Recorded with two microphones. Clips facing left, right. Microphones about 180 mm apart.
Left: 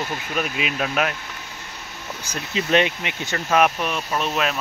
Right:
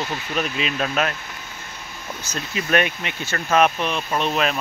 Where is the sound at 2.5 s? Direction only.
20° left (ahead or behind); by 4.6 s centre (ahead or behind).